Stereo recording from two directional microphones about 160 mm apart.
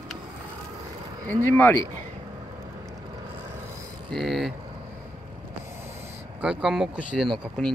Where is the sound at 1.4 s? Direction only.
15° left (ahead or behind).